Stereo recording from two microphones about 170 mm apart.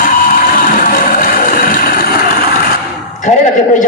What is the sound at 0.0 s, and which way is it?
Music, 55° left (ahead or behind).